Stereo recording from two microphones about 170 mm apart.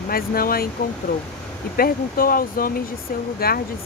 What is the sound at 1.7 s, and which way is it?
Speech, 60° left (ahead or behind).